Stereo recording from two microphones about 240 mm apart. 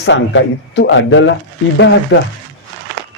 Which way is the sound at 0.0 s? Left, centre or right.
Left.